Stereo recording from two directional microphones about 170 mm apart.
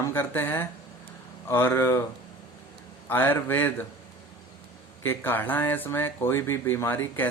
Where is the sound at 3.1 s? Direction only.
10° left (ahead or behind).